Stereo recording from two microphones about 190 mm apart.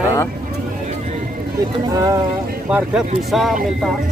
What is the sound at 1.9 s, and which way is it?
Speech, 20° right (ahead or behind).